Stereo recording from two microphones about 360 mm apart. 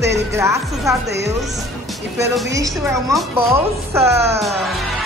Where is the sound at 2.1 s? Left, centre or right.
Centre.